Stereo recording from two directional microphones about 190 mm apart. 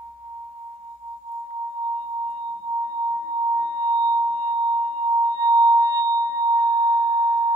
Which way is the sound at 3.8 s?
20° right (ahead or behind).